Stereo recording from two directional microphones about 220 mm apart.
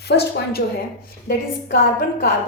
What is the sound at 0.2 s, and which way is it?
Speech, 45° left (ahead or behind).